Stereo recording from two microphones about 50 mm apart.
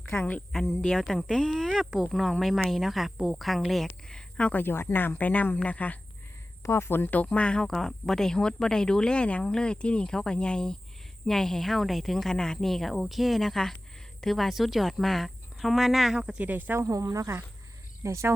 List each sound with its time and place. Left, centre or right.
0.1 s speech: left
0.5 s speech: centre
1.3 s speech: centre
4.5 s speech: left
6.6 s speech: left
7.3 s speech: left
7.7 s speech: centre
16.1 s speech: centre
16.4 s speech: right
16.7 s speech: right
18.0 s speech: right